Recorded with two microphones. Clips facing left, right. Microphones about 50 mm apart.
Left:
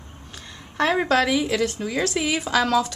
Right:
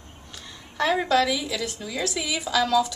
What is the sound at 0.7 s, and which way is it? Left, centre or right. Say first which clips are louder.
A woman's voice: left 2 dB; left.